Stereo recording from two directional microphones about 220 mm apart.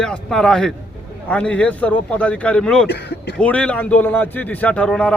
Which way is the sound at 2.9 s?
50° left (ahead or behind).